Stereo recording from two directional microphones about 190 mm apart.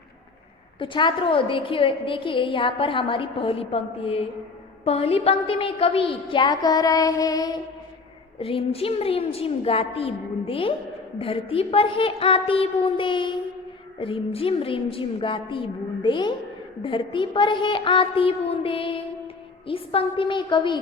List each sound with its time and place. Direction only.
0.8 s a woman's voice: 25° left (ahead or behind)
8.4 s a woman's voice: 30° left (ahead or behind)